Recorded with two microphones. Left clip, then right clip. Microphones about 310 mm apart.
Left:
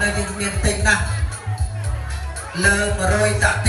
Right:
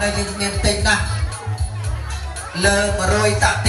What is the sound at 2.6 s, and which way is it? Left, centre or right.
Music, centre.